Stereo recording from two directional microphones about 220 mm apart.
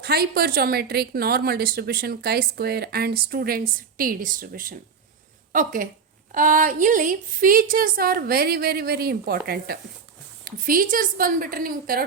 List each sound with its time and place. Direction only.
0.0 s a woman's voice: 45° right (ahead or behind)